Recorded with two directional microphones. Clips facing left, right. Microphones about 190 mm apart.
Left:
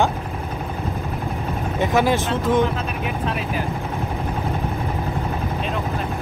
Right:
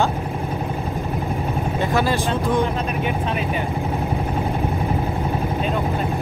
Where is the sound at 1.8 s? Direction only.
15° left (ahead or behind).